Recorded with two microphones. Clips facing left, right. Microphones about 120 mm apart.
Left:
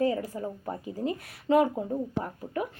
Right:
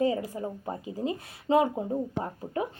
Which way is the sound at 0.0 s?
20° right (ahead or behind).